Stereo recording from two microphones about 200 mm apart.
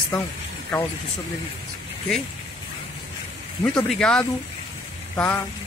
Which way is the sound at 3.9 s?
5° left (ahead or behind).